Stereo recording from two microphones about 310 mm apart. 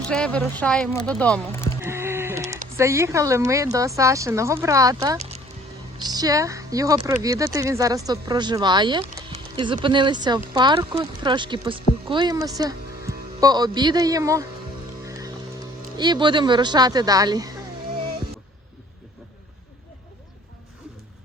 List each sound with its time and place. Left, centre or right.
0.1 s speech: centre
1.8 s sheep: centre
2.7 s speech: centre
15.0 s music: centre
16.0 s speech: centre